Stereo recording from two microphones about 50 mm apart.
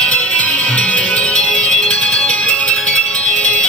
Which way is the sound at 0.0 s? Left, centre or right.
Left.